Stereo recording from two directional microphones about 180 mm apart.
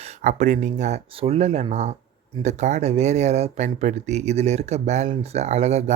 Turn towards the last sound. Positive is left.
turn(degrees=-35)  # may be behind; listen again after turning